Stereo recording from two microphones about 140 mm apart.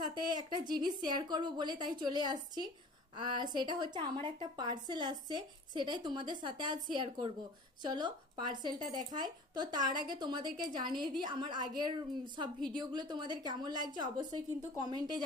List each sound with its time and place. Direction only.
0.1 s a woman's voice: 30° right (ahead or behind)